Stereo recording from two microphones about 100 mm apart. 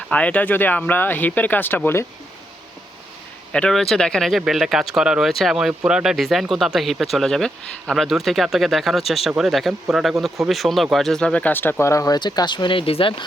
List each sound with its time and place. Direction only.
0.1 s speech: 15° left (ahead or behind)
3.5 s speech: 5° left (ahead or behind); by 13.2 s 60° left (ahead or behind)